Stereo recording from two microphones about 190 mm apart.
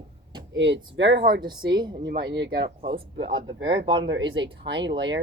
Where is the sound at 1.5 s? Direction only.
25° right (ahead or behind).